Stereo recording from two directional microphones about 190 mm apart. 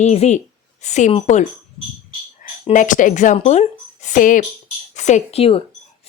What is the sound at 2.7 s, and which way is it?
A woman's voice, 45° left (ahead or behind).